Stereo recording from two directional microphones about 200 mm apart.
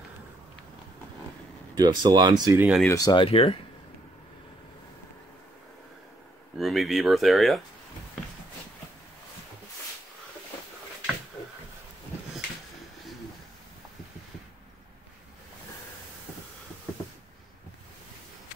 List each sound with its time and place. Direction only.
1.8 s speech: 20° right (ahead or behind)
2.9 s speech: 20° left (ahead or behind)
6.5 s speech: centre (ahead or behind)